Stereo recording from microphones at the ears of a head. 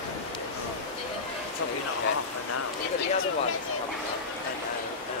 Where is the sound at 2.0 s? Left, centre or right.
Left.